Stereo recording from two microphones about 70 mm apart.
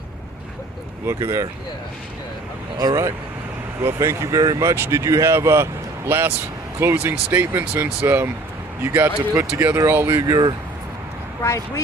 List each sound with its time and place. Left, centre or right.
1.0 s speech: right
2.7 s speech: right
3.8 s speech: right
10.2 s speech: right
11.4 s speech: left